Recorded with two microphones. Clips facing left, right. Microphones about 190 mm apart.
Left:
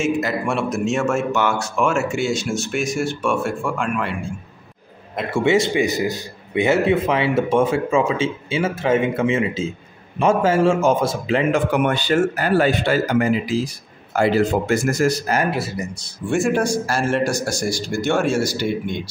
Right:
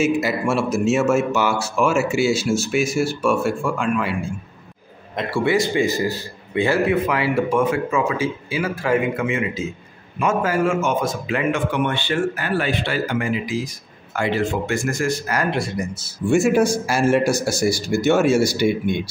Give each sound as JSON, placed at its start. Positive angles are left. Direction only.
{"t": 0.0, "sound": "speech", "side_deg": -5}
{"t": 5.3, "sound": "speech", "side_deg": 20}
{"t": 11.7, "sound": "speech", "side_deg": 45}
{"t": 15.5, "sound": "speech", "side_deg": 5}